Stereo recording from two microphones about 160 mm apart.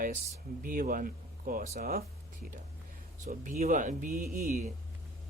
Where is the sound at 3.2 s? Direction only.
55° right (ahead or behind).